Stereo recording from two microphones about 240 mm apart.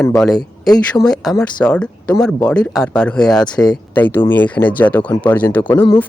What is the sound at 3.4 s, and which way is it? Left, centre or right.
Speech, centre.